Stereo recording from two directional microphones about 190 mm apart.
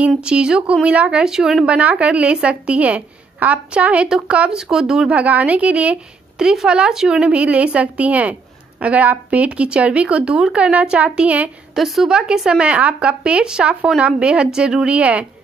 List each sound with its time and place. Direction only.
0.0 s speech: 5° right (ahead or behind)